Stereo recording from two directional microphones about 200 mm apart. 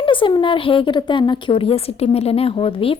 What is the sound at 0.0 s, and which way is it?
A woman's voice, 25° left (ahead or behind).